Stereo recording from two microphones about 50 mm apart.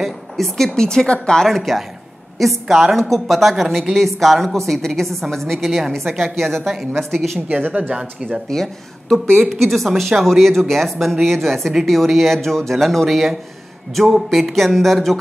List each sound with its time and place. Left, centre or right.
0.0 s a sound: centre
0.7 s a woman's voice: centre
1.6 s a woman's voice: centre
7.4 s a woman's voice: right
7.9 s speech: centre
8.3 s a woman's voice: centre